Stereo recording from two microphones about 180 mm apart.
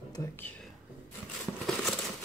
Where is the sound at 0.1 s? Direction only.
20° left (ahead or behind).